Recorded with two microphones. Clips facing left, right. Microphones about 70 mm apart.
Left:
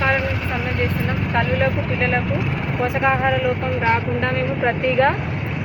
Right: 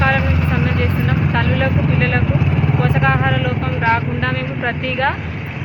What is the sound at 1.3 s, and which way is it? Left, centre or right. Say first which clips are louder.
Speech: left 1 dB; centre.